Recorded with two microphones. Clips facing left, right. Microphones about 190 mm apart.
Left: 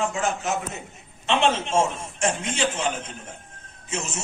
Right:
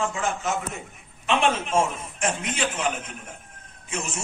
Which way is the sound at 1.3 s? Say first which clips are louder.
Left 1 dB; 25° left (ahead or behind).